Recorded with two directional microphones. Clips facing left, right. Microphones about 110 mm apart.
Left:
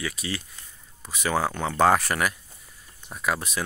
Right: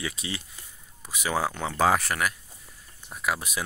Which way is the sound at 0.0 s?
25° right (ahead or behind).